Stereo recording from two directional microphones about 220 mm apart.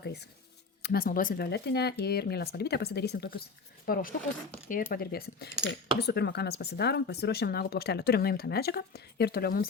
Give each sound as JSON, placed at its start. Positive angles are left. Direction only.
{"t": 0.0, "sound": "speech", "side_deg": 50}